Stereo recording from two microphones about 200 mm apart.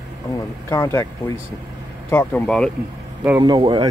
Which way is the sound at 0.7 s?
15° left (ahead or behind).